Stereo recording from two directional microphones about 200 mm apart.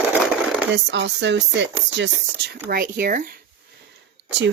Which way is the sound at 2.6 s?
45° right (ahead or behind).